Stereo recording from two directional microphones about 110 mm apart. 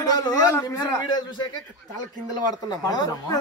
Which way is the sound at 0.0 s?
35° left (ahead or behind).